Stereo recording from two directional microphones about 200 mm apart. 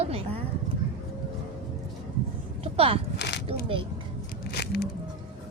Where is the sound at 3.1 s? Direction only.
60° left (ahead or behind).